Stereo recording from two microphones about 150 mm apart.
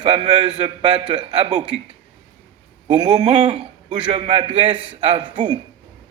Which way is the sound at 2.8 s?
30° right (ahead or behind).